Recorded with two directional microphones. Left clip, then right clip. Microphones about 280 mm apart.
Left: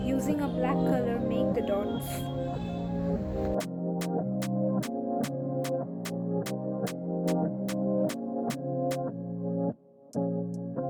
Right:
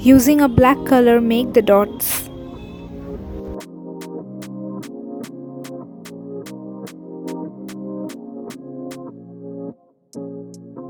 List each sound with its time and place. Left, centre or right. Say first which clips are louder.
0.1 s speech: right 19 dB; right
4.4 s music: left 1 dB; centre
6.8 s music: right 1 dB; centre